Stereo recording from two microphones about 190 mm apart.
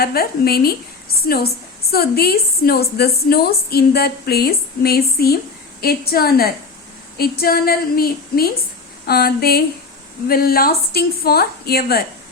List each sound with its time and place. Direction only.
0.0 s a woman's voice: 55° left (ahead or behind)